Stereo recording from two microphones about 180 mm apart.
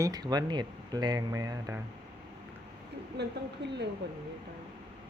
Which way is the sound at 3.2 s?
70° right (ahead or behind).